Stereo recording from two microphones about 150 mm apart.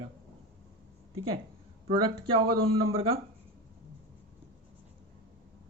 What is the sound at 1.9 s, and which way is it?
Speech, 35° right (ahead or behind).